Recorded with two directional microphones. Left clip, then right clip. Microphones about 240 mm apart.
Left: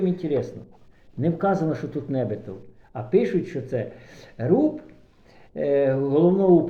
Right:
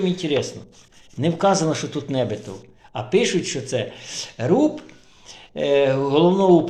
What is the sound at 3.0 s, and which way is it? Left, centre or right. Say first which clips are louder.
Speech: right 2 dB; right.